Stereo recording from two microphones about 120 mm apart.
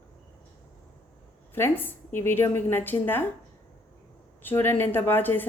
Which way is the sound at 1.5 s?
20° left (ahead or behind).